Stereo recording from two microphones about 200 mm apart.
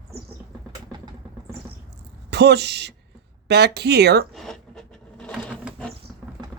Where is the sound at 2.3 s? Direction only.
55° right (ahead or behind).